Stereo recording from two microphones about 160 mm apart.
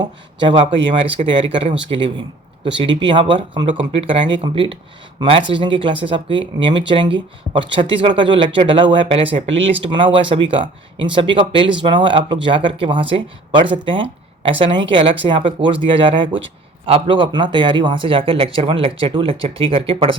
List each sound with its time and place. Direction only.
0.0 s a man's voice: 30° right (ahead or behind)